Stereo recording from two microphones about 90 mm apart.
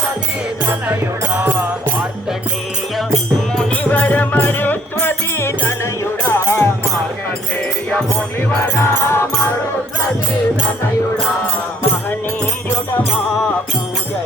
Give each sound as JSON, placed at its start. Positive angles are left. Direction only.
{"t": 0.6, "sound": "music", "side_deg": -20}
{"t": 3.5, "sound": "music", "side_deg": 5}
{"t": 3.9, "sound": "music", "side_deg": 20}
{"t": 8.4, "sound": "music", "side_deg": 25}